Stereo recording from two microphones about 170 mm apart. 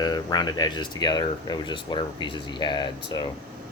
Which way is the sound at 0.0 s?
25° left (ahead or behind).